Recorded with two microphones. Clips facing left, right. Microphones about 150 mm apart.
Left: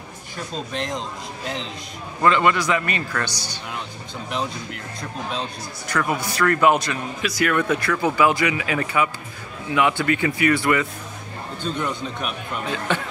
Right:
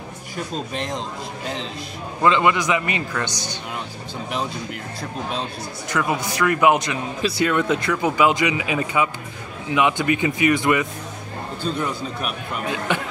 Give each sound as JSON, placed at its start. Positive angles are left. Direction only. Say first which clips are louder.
{"t": 0.7, "sound": "speech", "louder": "left 1 dB", "side_deg": 0}
{"t": 2.2, "sound": "a man's voice", "louder": "even", "side_deg": -15}
{"t": 5.9, "sound": "a man's voice", "louder": "right 1 dB", "side_deg": -20}
{"t": 7.2, "sound": "speech", "louder": "right 1 dB", "side_deg": -30}
{"t": 11.8, "sound": "a man's voice", "louder": "right 1 dB", "side_deg": -5}